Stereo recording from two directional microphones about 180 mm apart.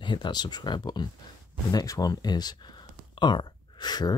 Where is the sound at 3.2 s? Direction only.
25° left (ahead or behind).